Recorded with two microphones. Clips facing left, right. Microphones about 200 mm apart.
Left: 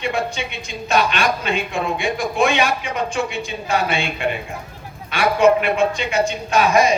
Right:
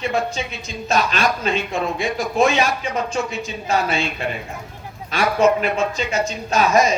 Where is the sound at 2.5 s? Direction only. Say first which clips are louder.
Even; 35° right (ahead or behind).